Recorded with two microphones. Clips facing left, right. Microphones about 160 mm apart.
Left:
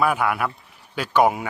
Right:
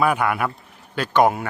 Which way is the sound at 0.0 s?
Centre (ahead or behind).